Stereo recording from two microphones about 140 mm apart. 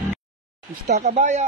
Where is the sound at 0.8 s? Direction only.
60° right (ahead or behind).